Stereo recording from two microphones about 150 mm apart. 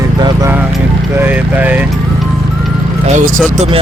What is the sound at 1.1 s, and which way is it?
Speech, 10° right (ahead or behind).